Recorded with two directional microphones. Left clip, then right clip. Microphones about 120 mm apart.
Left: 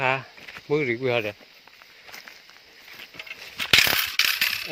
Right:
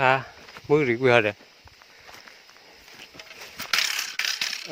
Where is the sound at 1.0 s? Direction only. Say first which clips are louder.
Right 6 dB; 65° right (ahead or behind).